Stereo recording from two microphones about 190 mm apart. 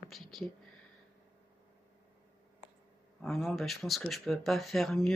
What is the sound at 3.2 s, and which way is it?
Speech, centre (ahead or behind).